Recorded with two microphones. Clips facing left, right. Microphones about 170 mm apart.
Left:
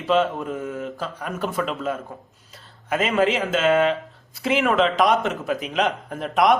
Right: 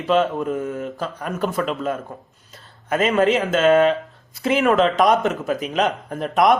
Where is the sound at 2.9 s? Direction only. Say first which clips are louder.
Right 3 dB; 45° right (ahead or behind).